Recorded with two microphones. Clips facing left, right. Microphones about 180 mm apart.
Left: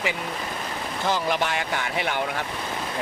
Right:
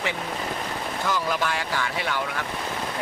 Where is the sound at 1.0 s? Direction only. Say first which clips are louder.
Left 2 dB; 25° left (ahead or behind).